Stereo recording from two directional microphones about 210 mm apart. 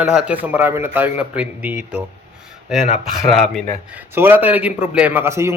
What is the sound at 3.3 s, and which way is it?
Speech, centre (ahead or behind).